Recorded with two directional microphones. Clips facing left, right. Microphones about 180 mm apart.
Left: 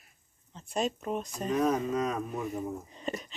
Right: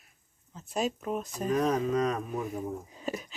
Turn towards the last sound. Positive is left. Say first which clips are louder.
# right 1 dB
turn(degrees=-5)  # may be behind; listen again after turning